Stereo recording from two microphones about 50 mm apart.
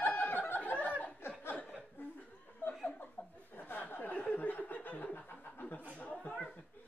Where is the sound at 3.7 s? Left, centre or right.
Left.